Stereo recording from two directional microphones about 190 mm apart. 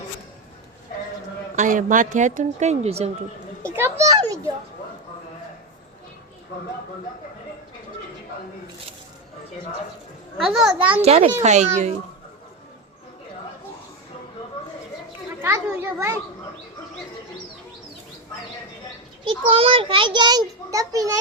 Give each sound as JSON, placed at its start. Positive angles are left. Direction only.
{"t": 1.5, "sound": "speech", "side_deg": -45}
{"t": 3.8, "sound": "a child's voice", "side_deg": -15}
{"t": 10.3, "sound": "a child's voice", "side_deg": 0}
{"t": 11.0, "sound": "speech", "side_deg": -35}
{"t": 15.4, "sound": "a child's voice", "side_deg": -10}
{"t": 19.2, "sound": "a child's voice", "side_deg": -30}